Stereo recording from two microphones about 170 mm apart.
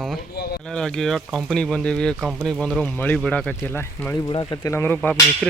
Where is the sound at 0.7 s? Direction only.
5° left (ahead or behind).